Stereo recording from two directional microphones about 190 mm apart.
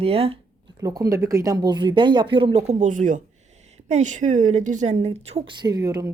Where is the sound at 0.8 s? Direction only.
20° right (ahead or behind).